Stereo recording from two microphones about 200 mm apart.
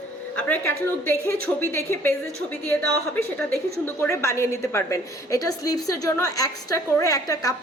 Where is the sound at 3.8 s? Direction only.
15° left (ahead or behind).